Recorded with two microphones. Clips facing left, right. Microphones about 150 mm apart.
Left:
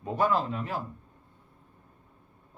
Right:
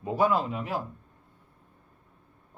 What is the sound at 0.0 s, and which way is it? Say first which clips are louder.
Speech: right 2 dB; 5° right (ahead or behind).